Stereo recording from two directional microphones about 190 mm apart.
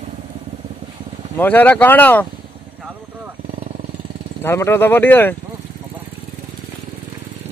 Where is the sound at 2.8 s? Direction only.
10° right (ahead or behind).